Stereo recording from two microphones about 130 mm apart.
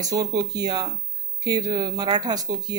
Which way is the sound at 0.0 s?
30° right (ahead or behind).